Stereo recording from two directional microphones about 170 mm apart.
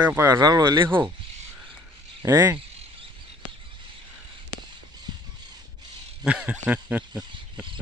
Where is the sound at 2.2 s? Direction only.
20° right (ahead or behind).